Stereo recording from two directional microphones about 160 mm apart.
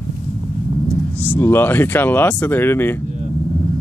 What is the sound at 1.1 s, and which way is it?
Speech, 10° left (ahead or behind).